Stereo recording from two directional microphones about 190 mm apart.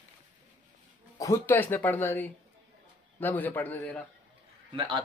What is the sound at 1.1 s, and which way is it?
Speech, 15° left (ahead or behind).